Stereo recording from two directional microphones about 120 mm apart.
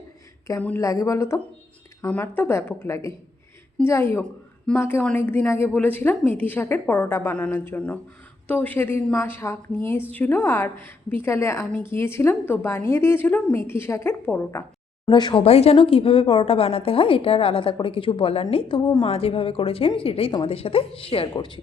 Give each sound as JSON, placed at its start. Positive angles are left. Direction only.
{"t": 0.8, "sound": "a woman's voice", "side_deg": 25}
{"t": 4.2, "sound": "a woman's voice", "side_deg": 5}
{"t": 15.1, "sound": "speech", "side_deg": 40}
{"t": 15.4, "sound": "a woman's voice", "side_deg": 60}
{"t": 19.0, "sound": "a woman's voice", "side_deg": 55}